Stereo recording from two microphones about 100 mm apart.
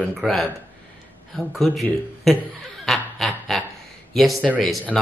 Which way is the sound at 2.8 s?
Centre (ahead or behind).